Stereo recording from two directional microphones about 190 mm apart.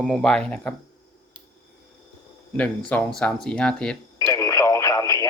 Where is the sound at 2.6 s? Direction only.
5° left (ahead or behind).